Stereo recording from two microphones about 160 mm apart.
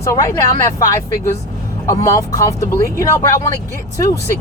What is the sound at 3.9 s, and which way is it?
Speech, 20° left (ahead or behind).